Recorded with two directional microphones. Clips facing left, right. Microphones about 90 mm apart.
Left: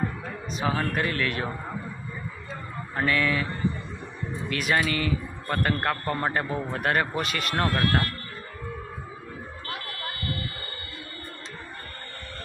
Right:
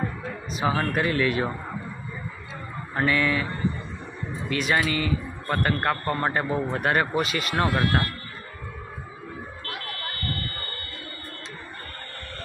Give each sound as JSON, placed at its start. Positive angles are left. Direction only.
{"t": 0.5, "sound": "a man's voice", "side_deg": -5}
{"t": 2.9, "sound": "a man's voice", "side_deg": 0}
{"t": 4.4, "sound": "a man's voice", "side_deg": 0}
{"t": 7.5, "sound": "speech", "side_deg": -15}
{"t": 10.0, "sound": "buzzer", "side_deg": 10}